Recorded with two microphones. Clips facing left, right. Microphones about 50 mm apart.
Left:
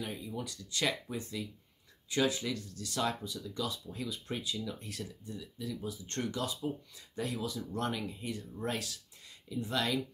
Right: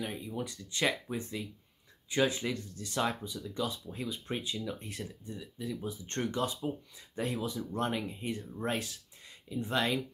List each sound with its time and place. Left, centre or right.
0.0 s speech: right